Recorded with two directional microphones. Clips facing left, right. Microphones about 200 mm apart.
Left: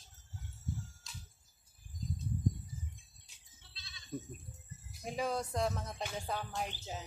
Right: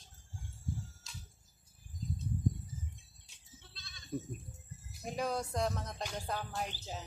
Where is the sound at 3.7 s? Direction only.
50° right (ahead or behind).